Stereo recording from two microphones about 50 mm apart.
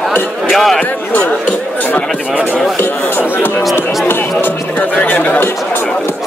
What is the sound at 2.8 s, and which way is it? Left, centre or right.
Speech, left.